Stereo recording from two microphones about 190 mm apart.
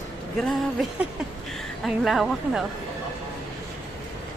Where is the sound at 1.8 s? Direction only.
Centre (ahead or behind).